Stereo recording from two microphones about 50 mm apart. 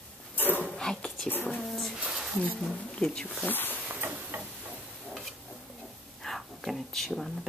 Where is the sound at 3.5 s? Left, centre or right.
Left.